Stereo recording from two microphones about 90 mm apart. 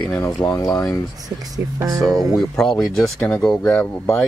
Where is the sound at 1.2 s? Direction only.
45° right (ahead or behind).